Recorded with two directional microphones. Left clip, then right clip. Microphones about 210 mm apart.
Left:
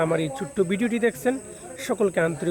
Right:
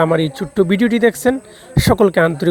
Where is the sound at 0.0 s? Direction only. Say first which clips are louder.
Right 9 dB; 40° right (ahead or behind).